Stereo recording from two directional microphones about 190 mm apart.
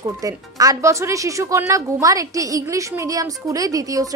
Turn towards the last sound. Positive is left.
turn(degrees=-20)  # may be behind; listen again after turning